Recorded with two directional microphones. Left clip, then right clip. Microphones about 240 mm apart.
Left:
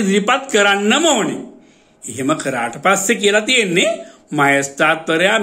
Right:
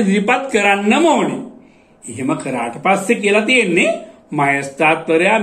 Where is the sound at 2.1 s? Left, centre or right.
Left.